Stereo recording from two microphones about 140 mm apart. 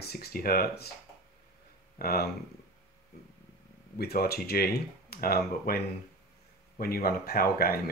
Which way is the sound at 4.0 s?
90° left.